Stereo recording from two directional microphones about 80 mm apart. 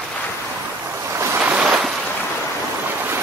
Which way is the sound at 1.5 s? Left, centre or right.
Centre.